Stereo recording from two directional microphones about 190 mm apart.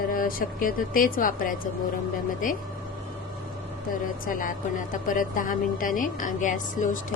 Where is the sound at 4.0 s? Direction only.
45° left (ahead or behind).